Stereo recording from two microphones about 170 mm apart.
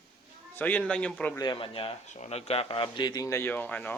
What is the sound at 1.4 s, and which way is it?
Speech, 30° left (ahead or behind).